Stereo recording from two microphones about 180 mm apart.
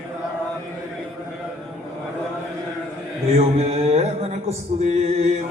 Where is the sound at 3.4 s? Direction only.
35° right (ahead or behind).